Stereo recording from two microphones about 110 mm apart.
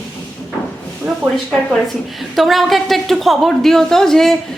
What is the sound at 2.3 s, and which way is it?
A woman's voice, centre (ahead or behind).